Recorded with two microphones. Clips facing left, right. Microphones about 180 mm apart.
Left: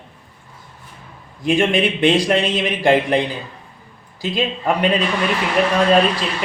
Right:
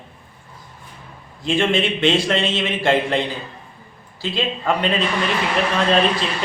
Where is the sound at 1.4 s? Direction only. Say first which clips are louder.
Left 2 dB; 15° left (ahead or behind).